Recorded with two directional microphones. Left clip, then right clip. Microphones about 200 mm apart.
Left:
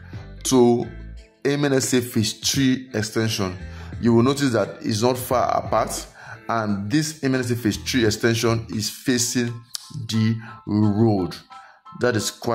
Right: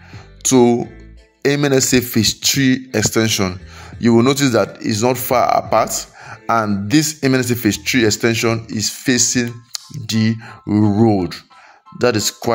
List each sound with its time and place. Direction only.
0.4 s speech: 10° right (ahead or behind)
2.9 s speech: 20° right (ahead or behind)